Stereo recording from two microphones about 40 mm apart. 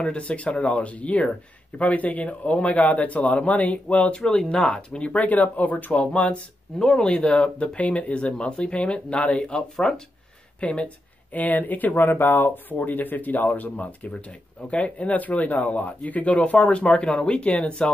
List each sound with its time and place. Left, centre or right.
0.0 s speech: left
4.3 s speech: centre
4.9 s speech: left
5.2 s speech: left
5.9 s speech: left
10.6 s speech: left
11.3 s speech: left
12.6 s speech: left